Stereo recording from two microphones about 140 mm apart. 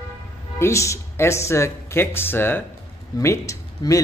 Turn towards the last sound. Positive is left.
turn(degrees=25)  # may be behind; listen again after turning